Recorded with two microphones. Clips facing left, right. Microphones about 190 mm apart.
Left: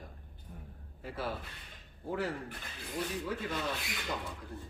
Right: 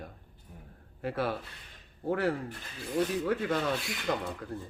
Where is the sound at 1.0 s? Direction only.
65° right (ahead or behind).